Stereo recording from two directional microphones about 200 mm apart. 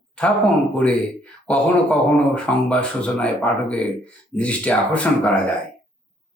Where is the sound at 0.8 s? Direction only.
5° left (ahead or behind).